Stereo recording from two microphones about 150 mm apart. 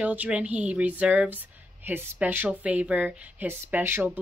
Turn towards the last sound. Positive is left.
turn(degrees=-15)  # may be behind; listen again after turning